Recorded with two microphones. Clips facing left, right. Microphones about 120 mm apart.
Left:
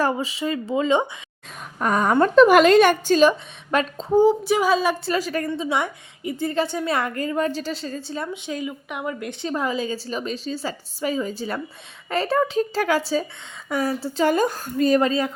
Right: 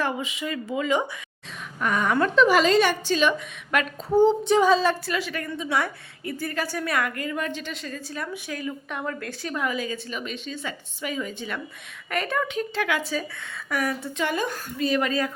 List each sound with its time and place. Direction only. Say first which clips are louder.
0.0 s a woman's voice: left 5 dB; 35° left (ahead or behind)
1.8 s a woman's voice: left 4 dB; 35° left (ahead or behind)
4.1 s a woman's voice: left 1 dB; 10° left (ahead or behind)
5.0 s a woman's voice: left 5 dB; 40° left (ahead or behind)
5.6 s a woman's voice: left 2 dB; 20° left (ahead or behind); by 15.0 s 40° left (ahead or behind)
15.0 s a woman's voice: left 4 dB; 25° left (ahead or behind)